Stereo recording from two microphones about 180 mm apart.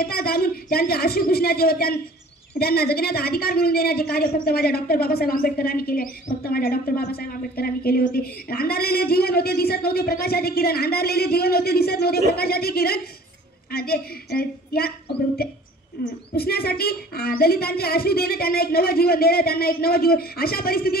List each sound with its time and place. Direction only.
0.0 s a woman's voice: 60° left (ahead or behind)